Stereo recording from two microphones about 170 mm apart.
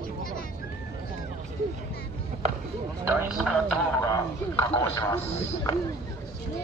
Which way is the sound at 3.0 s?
10° right (ahead or behind).